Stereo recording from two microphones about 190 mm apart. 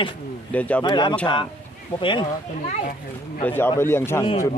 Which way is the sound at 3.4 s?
10° left (ahead or behind).